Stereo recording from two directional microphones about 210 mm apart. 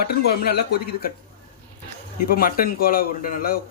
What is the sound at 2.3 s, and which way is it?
Speech, 45° left (ahead or behind).